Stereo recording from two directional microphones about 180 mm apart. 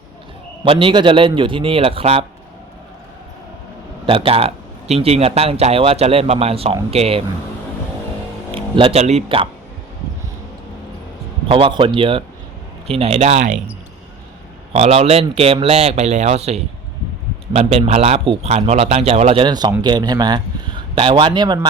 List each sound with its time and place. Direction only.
0.6 s a man's voice: 30° right (ahead or behind)
4.0 s speech: 30° right (ahead or behind)
8.5 s speech: 30° right (ahead or behind)
11.4 s a man's voice: 30° right (ahead or behind)
14.7 s a man's voice: 35° right (ahead or behind)